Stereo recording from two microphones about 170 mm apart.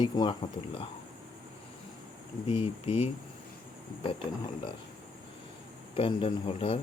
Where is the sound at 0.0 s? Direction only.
25° left (ahead or behind).